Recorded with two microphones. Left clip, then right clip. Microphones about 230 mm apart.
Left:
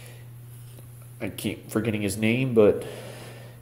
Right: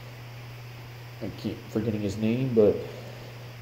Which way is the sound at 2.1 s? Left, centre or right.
Centre.